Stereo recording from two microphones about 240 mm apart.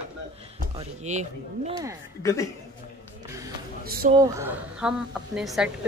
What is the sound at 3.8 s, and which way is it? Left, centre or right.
Speech, right.